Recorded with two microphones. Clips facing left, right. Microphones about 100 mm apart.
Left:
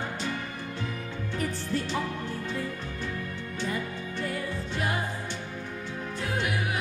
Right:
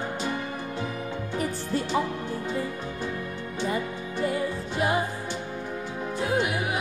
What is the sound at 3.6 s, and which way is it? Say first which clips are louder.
Music: right 4 dB; 20° right (ahead or behind).